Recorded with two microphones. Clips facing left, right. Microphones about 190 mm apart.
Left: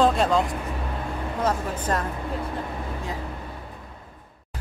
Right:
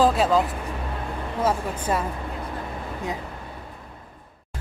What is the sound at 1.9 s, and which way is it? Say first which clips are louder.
Speech: right 2 dB; 5° right (ahead or behind).